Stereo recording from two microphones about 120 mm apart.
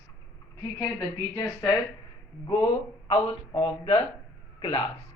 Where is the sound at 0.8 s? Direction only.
25° left (ahead or behind).